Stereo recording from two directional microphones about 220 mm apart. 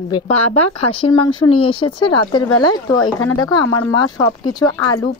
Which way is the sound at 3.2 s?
70° left (ahead or behind).